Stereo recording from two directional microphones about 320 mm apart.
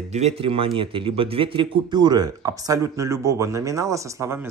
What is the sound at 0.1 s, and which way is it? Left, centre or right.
A man's voice, centre.